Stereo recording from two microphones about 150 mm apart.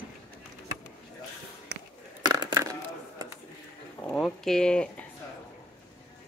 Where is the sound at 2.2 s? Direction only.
30° right (ahead or behind).